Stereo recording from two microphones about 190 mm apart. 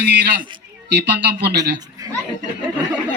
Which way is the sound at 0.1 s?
60° right (ahead or behind).